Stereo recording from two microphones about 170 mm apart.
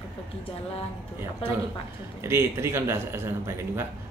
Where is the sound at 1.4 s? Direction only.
35° left (ahead or behind).